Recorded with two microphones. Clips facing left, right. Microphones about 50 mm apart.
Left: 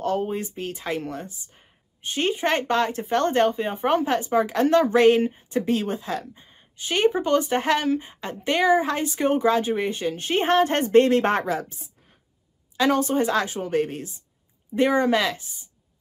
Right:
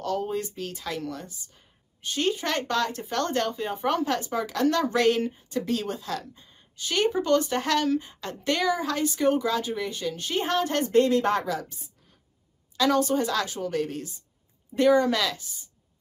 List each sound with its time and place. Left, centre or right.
0.0 s a woman's voice: left